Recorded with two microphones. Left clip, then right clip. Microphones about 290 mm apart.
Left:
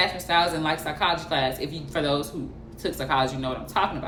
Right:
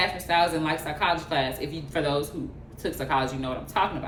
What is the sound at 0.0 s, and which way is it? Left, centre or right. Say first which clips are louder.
Speech: left 1 dB; centre.